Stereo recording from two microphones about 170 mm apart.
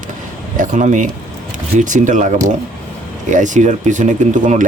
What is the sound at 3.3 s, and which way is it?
Speech, 45° right (ahead or behind).